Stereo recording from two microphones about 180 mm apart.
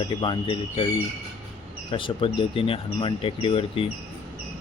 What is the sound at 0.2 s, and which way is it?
Speech, 30° left (ahead or behind).